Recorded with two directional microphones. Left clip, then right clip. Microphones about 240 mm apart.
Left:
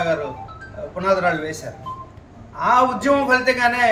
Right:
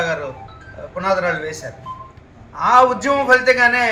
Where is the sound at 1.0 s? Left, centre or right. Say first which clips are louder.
Even; centre.